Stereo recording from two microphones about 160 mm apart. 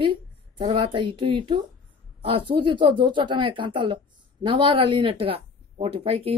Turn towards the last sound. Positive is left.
turn(degrees=-40)  # may be behind; listen again after turning